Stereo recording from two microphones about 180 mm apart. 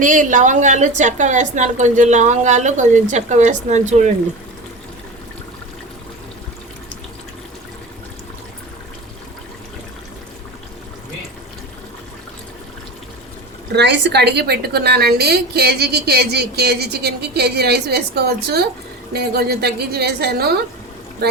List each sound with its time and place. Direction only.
0.0 s a woman's voice: 45° right (ahead or behind)
13.7 s a woman's voice: 75° right (ahead or behind)